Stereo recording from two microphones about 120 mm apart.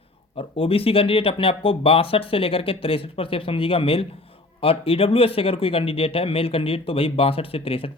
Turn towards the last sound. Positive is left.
turn(degrees=50)  # may be behind; listen again after turning